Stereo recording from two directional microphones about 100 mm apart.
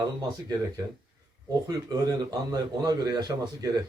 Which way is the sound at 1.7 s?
40° right (ahead or behind).